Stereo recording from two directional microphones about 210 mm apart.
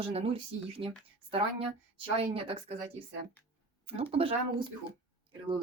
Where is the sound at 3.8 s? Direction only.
25° right (ahead or behind).